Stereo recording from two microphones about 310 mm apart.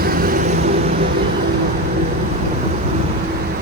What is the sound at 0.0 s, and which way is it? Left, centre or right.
Vehicle, right.